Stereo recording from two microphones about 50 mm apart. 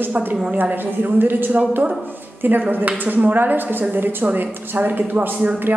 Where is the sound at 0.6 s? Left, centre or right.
Right.